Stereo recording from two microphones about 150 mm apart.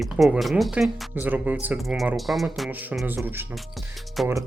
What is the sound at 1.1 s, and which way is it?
Speech, 10° right (ahead or behind).